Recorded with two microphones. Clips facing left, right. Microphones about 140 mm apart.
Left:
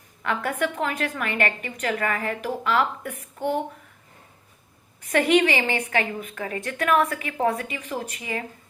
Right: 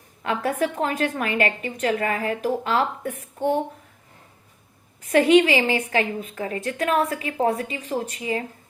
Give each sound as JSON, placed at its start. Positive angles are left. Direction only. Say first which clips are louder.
{"t": 0.2, "sound": "a woman's voice", "louder": "right 2 dB", "side_deg": -35}
{"t": 5.1, "sound": "a woman's voice", "louder": "right 4 dB", "side_deg": -30}